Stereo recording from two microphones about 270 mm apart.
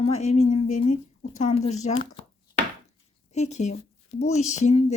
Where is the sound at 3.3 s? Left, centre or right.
Left.